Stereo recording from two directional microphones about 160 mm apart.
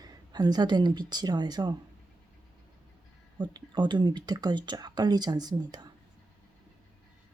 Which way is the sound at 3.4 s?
30° right (ahead or behind).